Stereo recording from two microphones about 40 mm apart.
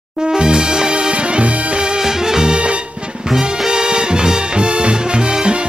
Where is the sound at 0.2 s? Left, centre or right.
Right.